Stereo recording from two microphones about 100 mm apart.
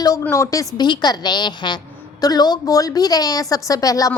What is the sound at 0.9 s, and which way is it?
A woman's voice, 45° left (ahead or behind).